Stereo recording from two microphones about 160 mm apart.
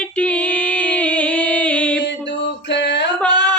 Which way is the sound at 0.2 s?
10° left (ahead or behind).